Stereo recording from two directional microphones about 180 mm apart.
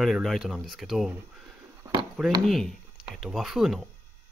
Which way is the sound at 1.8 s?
25° right (ahead or behind).